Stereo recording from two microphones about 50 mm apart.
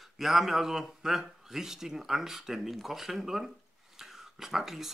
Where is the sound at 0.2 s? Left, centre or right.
Centre.